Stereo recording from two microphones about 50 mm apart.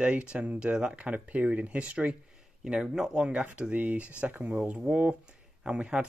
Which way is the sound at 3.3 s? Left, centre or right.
Right.